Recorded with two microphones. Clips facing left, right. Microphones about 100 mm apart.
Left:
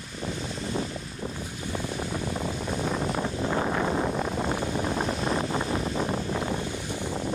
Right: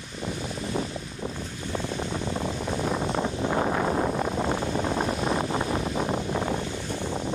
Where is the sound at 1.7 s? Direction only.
20° right (ahead or behind).